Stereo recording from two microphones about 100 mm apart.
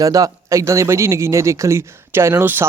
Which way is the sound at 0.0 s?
35° right (ahead or behind).